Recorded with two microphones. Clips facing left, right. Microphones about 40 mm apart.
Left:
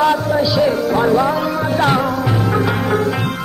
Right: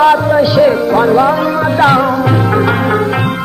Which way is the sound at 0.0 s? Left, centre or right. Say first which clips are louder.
Right 6 dB; right.